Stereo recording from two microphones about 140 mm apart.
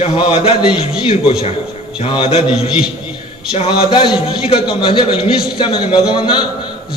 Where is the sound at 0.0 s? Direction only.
40° left (ahead or behind).